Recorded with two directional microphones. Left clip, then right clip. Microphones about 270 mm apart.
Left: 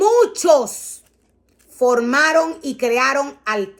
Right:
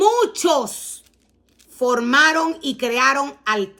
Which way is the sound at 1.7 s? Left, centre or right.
Centre.